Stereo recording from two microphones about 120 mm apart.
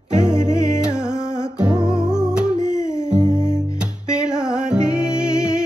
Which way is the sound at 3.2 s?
35° right (ahead or behind).